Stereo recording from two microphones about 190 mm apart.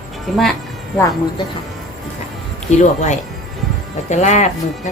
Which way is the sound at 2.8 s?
40° left (ahead or behind).